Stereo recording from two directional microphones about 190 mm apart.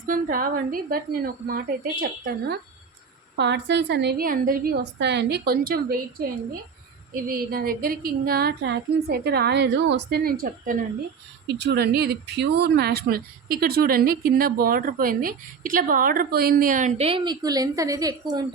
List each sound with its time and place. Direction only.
0.0 s speech: 45° right (ahead or behind)
3.3 s a woman's voice: 65° right (ahead or behind); by 10.8 s 45° right (ahead or behind)
11.4 s speech: 65° right (ahead or behind); by 17.1 s 40° right (ahead or behind)
17.1 s a woman's voice: 25° right (ahead or behind)